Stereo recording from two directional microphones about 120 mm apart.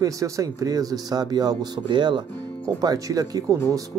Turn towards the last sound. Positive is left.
turn(degrees=-30)  # may be behind; listen again after turning